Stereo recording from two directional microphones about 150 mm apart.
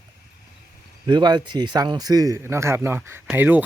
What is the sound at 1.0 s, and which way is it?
Speech, 30° right (ahead or behind).